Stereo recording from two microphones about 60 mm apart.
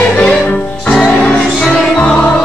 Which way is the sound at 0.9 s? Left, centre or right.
Centre.